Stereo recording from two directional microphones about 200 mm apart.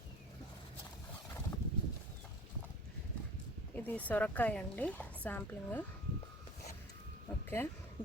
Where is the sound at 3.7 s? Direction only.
10° left (ahead or behind).